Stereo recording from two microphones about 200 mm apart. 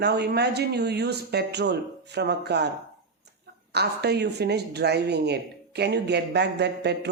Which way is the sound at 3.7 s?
55° right (ahead or behind).